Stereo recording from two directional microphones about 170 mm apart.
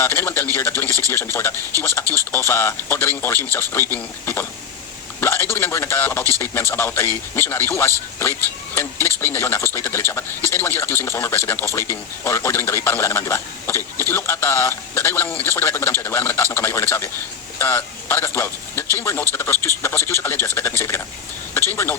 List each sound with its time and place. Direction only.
0.0 s a man's voice: 10° left (ahead or behind)
0.9 s speech: 20° right (ahead or behind)
1.1 s a man's voice: 15° left (ahead or behind)